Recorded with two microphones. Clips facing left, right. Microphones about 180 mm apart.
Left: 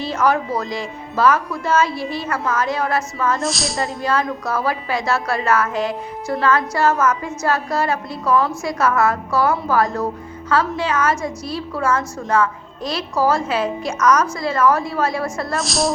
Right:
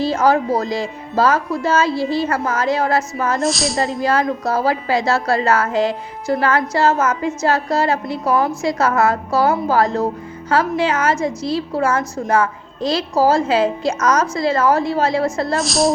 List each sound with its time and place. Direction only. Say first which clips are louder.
0.0 s a woman's voice: right 3 dB; 30° right (ahead or behind)
3.4 s speech: right 4 dB; centre (ahead or behind)
4.0 s a woman's voice: right 2 dB; 30° right (ahead or behind)
15.5 s speech: right 2 dB; centre (ahead or behind)